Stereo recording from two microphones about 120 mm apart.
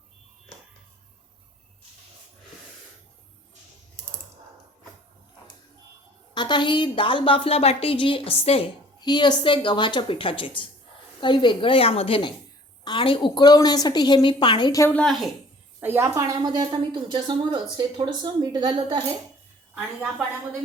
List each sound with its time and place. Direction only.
6.3 s a woman's voice: 40° left (ahead or behind); by 8.6 s 55° left (ahead or behind)
9.0 s a woman's voice: 40° left (ahead or behind)
15.0 s a woman's voice: centre (ahead or behind)
15.8 s a woman's voice: 20° right (ahead or behind); by 19.0 s 40° right (ahead or behind)
19.7 s a woman's voice: 10° right (ahead or behind)